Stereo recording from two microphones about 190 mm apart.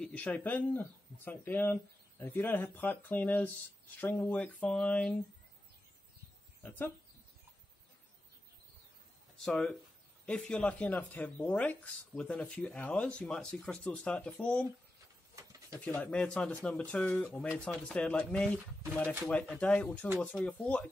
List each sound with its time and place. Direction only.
0.0 s speech: 5° left (ahead or behind)
9.4 s speech: 5° left (ahead or behind)
15.4 s pigeon: 15° right (ahead or behind)
15.8 s speech: 5° left (ahead or behind)
17.5 s speech: 5° right (ahead or behind)
17.9 s speech: 5° left (ahead or behind)